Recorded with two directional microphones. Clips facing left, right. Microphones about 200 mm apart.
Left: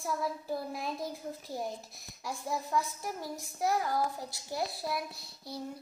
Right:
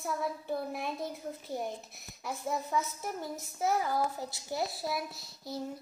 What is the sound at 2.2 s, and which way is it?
A child's voice, 5° right (ahead or behind).